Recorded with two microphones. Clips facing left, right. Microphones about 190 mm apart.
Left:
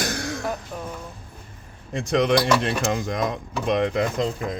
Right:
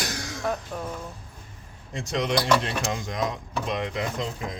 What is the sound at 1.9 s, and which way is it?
Speech, 55° left (ahead or behind).